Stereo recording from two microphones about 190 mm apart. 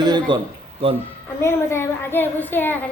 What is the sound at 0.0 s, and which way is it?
Speech, 20° right (ahead or behind).